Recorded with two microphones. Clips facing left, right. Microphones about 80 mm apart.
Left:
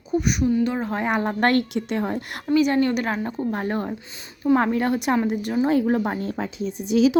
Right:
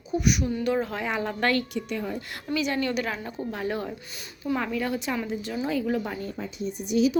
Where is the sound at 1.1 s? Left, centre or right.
Left.